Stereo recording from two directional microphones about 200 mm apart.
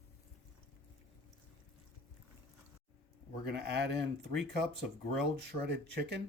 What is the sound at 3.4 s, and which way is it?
Speech, 55° right (ahead or behind).